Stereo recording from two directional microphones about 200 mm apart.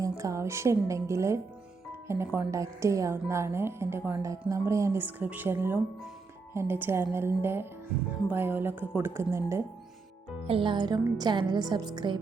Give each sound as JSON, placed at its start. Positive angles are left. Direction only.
{"t": 0.0, "sound": "a woman's voice", "side_deg": -15}
{"t": 10.4, "sound": "a woman's voice", "side_deg": -25}